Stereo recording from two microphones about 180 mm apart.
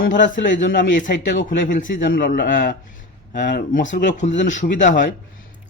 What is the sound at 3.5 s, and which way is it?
Speech, 70° left (ahead or behind).